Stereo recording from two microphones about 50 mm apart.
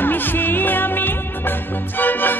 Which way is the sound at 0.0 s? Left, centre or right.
Left.